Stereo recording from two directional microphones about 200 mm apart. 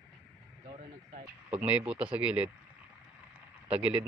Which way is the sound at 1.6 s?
5° right (ahead or behind).